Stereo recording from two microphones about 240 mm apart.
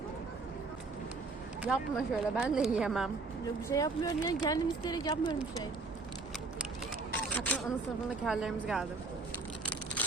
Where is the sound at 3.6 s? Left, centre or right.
Centre.